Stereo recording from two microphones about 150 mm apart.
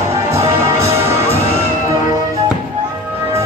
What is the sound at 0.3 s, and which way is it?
Music, 20° right (ahead or behind).